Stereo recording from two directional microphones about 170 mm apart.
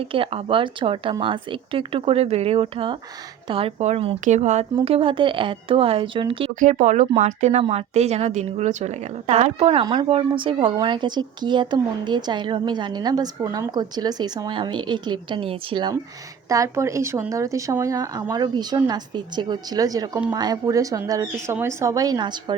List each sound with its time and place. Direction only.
0.0 s speech: 35° right (ahead or behind)
6.6 s a woman's voice: 45° right (ahead or behind); by 22.5 s 25° right (ahead or behind)